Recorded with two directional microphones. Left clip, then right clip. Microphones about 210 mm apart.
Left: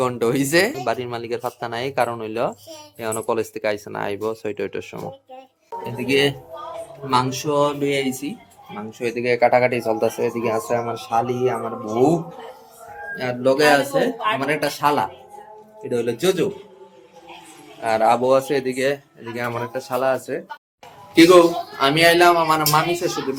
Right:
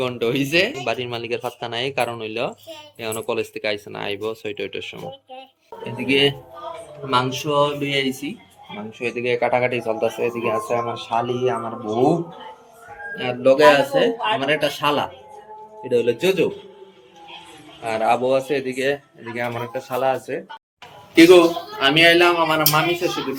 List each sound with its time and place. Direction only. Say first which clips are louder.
0.0 s speech: left 2 dB; 20° left (ahead or behind)
0.8 s speech: left 1 dB; 5° left (ahead or behind)
7.4 s speech: even; 10° left (ahead or behind)
13.1 s speech: right 3 dB; 15° left (ahead or behind)
17.8 s speech: left 2 dB; 20° left (ahead or behind)